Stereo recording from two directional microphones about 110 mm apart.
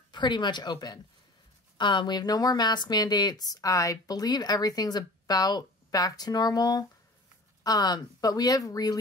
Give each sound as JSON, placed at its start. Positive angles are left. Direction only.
{"t": 0.1, "sound": "speech", "side_deg": 45}